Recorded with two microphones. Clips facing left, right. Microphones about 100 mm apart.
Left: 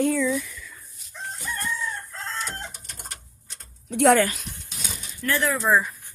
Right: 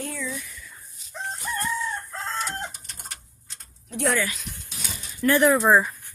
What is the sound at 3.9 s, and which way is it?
Speech, 80° left.